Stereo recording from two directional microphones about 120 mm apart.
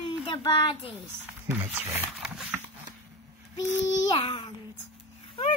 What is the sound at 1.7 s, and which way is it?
Speech, 15° right (ahead or behind).